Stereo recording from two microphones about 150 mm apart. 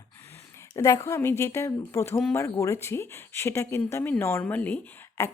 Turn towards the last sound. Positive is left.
turn(degrees=15)  # may be behind; listen again after turning